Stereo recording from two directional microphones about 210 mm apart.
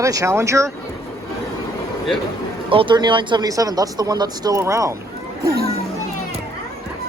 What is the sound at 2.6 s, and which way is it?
Speech, 25° right (ahead or behind).